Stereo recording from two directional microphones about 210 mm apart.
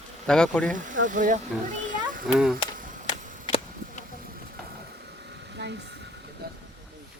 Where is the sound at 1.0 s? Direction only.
40° right (ahead or behind).